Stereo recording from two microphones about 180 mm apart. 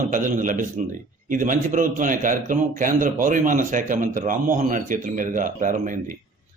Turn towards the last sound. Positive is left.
turn(degrees=-45)  # may be behind; listen again after turning